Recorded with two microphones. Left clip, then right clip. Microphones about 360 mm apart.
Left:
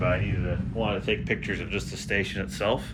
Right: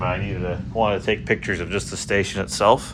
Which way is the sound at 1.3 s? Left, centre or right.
Right.